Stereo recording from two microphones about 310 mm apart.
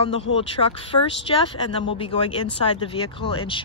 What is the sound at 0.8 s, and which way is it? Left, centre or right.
Speech, centre.